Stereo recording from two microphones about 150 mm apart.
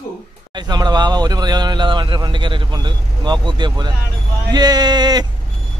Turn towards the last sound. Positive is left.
turn(degrees=-30)  # may be behind; listen again after turning